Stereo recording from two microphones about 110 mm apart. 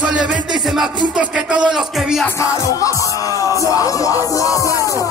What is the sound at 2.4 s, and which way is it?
Music, 30° left (ahead or behind).